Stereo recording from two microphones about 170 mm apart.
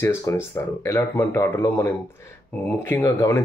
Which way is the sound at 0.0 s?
15° left (ahead or behind).